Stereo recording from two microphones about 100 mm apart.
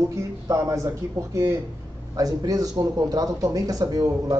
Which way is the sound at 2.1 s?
40° right (ahead or behind).